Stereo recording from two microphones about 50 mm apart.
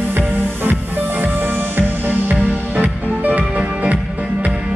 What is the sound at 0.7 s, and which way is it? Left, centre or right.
Music, right.